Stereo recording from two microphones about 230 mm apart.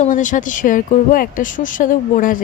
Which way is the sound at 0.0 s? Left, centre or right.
Left.